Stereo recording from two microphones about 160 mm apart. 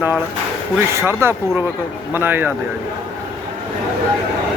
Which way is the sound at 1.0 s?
15° right (ahead or behind).